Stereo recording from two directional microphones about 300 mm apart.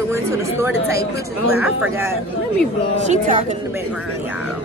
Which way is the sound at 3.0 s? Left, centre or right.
Right.